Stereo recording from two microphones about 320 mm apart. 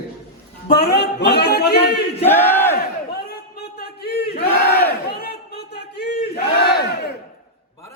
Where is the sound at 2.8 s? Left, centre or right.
Left.